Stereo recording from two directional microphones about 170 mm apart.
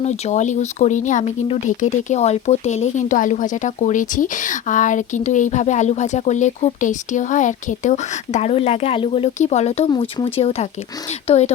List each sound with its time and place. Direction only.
0.0 s speech: 40° left (ahead or behind)
9.9 s speech: 25° left (ahead or behind)
10.3 s speech: 35° left (ahead or behind)